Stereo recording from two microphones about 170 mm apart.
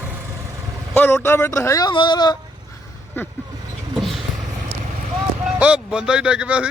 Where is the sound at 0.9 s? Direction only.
15° left (ahead or behind).